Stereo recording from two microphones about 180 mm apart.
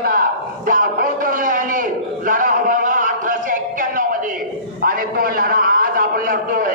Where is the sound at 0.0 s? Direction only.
55° right (ahead or behind).